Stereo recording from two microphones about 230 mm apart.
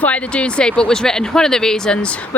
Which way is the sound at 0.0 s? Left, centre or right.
Centre.